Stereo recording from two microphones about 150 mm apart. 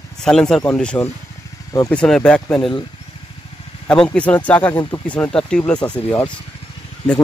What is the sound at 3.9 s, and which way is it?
Speech, 5° left (ahead or behind).